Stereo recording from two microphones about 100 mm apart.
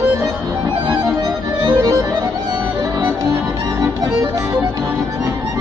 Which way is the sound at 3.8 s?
35° right (ahead or behind).